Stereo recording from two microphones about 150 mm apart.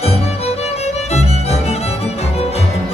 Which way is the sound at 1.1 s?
45° left (ahead or behind).